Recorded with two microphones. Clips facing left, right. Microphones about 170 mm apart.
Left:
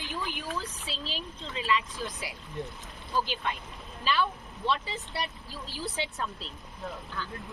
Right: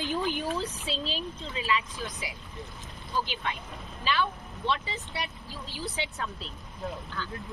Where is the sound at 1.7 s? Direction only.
5° right (ahead or behind).